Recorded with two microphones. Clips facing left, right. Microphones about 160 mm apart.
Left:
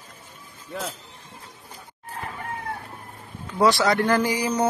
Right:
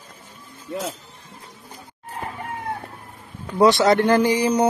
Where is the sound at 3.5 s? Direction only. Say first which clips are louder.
Right 4 dB; 20° right (ahead or behind).